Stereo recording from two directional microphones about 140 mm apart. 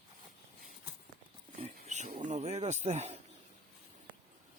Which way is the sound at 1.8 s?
55° right (ahead or behind).